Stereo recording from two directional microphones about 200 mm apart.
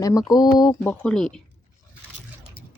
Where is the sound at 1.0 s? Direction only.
5° left (ahead or behind).